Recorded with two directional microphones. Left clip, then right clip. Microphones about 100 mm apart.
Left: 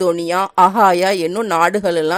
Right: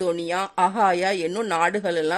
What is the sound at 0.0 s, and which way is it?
Speech, 40° left (ahead or behind).